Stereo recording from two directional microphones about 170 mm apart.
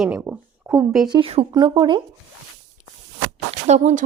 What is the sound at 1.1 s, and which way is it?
Speech, 30° right (ahead or behind).